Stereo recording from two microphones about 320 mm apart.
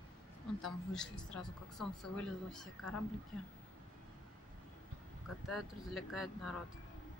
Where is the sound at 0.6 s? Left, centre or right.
Centre.